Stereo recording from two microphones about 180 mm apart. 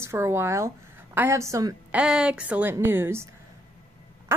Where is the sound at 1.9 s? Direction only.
5° right (ahead or behind).